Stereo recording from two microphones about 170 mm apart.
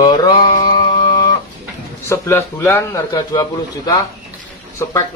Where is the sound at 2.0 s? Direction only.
15° left (ahead or behind).